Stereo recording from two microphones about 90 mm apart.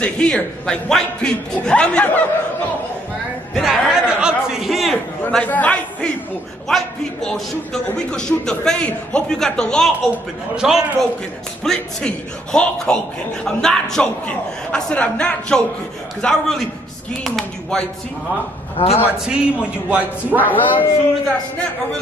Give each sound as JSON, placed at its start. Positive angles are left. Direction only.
{"t": 0.0, "sound": "a man's voice", "side_deg": 10}
{"t": 3.5, "sound": "a man's voice", "side_deg": -5}
{"t": 5.4, "sound": "a man's voice", "side_deg": 15}
{"t": 6.7, "sound": "a man's voice", "side_deg": 5}
{"t": 10.5, "sound": "a man's voice", "side_deg": -10}
{"t": 11.6, "sound": "a man's voice", "side_deg": 10}
{"t": 18.8, "sound": "a man's voice", "side_deg": 90}
{"t": 19.1, "sound": "a man's voice", "side_deg": -10}
{"t": 19.9, "sound": "a man's voice", "side_deg": -20}
{"t": 20.4, "sound": "speech", "side_deg": 20}